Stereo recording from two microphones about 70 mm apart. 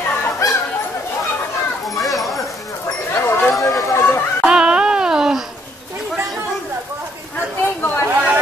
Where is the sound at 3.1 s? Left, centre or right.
Left.